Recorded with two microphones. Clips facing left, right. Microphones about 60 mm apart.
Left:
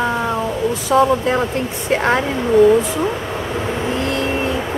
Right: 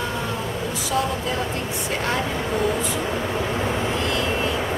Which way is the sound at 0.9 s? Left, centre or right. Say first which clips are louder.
Left 10 dB; left.